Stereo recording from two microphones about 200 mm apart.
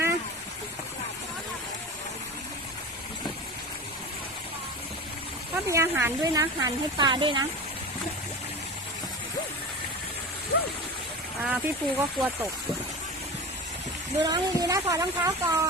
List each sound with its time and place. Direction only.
5.6 s speech: 15° right (ahead or behind)
11.4 s speech: 10° right (ahead or behind)
14.2 s speech: 20° right (ahead or behind)